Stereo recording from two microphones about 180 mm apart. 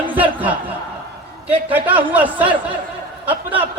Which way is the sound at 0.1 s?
10° right (ahead or behind).